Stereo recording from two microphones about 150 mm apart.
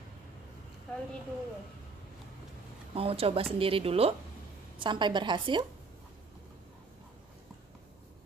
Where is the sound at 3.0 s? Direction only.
40° right (ahead or behind).